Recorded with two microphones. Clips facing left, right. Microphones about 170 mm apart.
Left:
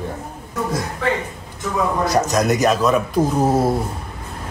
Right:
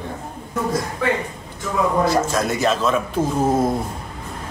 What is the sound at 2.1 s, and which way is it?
Speech, 20° left (ahead or behind).